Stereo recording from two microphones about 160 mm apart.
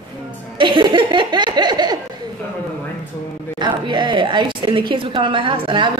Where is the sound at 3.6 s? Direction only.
30° right (ahead or behind).